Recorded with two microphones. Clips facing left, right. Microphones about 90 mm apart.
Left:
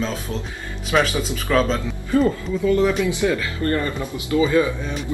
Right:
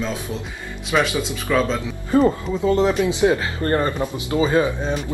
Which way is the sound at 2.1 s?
25° right (ahead or behind).